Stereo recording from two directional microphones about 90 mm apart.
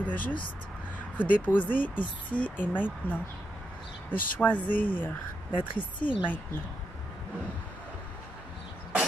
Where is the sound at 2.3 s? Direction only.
5° right (ahead or behind).